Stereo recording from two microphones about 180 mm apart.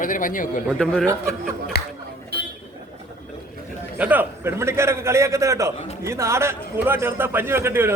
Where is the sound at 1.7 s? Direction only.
65° left (ahead or behind).